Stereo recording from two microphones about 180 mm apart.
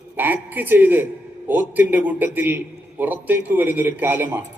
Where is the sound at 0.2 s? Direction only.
10° right (ahead or behind).